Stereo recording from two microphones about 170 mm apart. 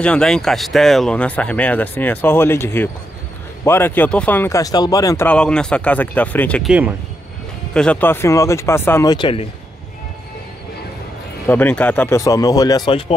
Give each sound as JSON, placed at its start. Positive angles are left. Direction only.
{"t": 0.0, "sound": "speech", "side_deg": 5}
{"t": 6.7, "sound": "speech", "side_deg": -10}
{"t": 7.7, "sound": "speech", "side_deg": 5}
{"t": 9.1, "sound": "speech", "side_deg": 30}
{"t": 11.4, "sound": "speech", "side_deg": 10}